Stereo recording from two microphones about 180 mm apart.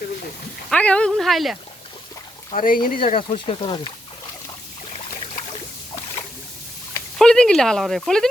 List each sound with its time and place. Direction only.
0.7 s speech: 5° left (ahead or behind)
2.5 s speech: 50° left (ahead or behind)
3.2 s speech: 30° left (ahead or behind)
7.2 s speech: 5° left (ahead or behind)